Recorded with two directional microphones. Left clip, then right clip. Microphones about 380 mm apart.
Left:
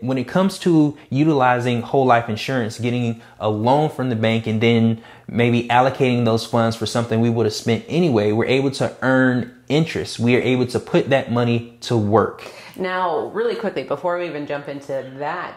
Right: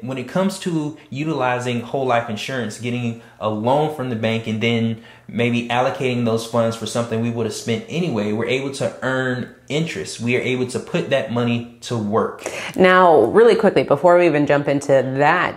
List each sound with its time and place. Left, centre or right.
0.1 s speech: left
12.7 s speech: right
13.7 s speech: right